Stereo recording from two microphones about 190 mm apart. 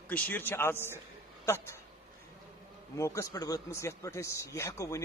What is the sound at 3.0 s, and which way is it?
A man's voice, 15° left (ahead or behind).